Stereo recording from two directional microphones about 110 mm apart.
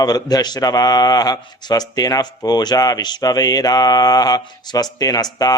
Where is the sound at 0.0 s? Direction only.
35° left (ahead or behind).